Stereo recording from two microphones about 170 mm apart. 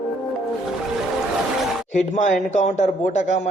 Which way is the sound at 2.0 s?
45° left (ahead or behind).